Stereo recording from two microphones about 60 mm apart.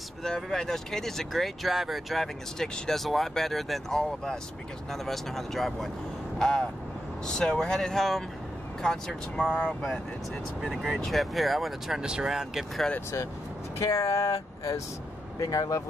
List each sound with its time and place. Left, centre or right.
0.2 s speech: centre
9.4 s speech: centre
10.7 s speech: centre
12.0 s speech: centre
13.7 s speech: left
15.4 s speech: left